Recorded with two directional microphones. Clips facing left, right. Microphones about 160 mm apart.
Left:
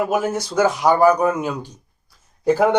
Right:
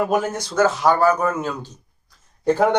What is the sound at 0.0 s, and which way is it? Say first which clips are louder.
Speech: left 1 dB; 5° left (ahead or behind).